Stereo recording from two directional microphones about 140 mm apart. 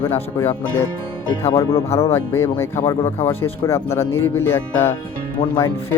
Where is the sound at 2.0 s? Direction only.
20° left (ahead or behind).